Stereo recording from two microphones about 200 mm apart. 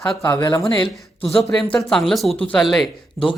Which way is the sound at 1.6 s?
5° left (ahead or behind).